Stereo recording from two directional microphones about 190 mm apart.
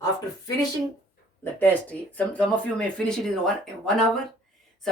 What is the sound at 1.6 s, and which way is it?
Speech, 10° left (ahead or behind).